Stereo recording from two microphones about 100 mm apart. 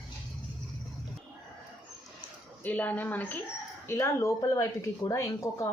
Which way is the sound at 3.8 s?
25° left (ahead or behind).